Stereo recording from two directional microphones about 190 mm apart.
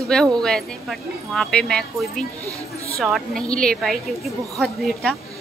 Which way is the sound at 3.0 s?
Centre (ahead or behind).